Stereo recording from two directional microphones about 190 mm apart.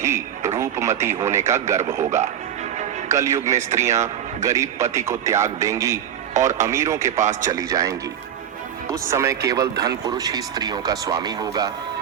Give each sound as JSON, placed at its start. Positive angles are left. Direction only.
{"t": 0.0, "sound": "radio", "side_deg": -15}
{"t": 1.0, "sound": "a man's voice", "side_deg": -15}
{"t": 2.0, "sound": "speech", "side_deg": -40}
{"t": 3.1, "sound": "a man's voice", "side_deg": -15}
{"t": 6.3, "sound": "speech", "side_deg": -40}
{"t": 6.7, "sound": "a man's voice", "side_deg": -15}
{"t": 7.2, "sound": "speech", "side_deg": -40}
{"t": 7.5, "sound": "a man's voice", "side_deg": -15}